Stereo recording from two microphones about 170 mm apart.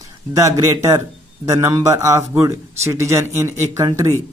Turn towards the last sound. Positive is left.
turn(degrees=-15)  # may be behind; listen again after turning